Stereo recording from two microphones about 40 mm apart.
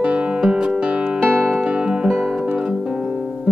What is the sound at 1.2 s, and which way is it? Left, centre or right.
Music, right.